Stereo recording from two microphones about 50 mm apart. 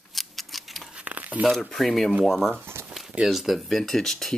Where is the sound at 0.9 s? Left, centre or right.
Right.